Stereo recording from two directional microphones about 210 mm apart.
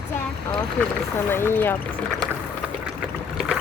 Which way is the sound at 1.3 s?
10° left (ahead or behind).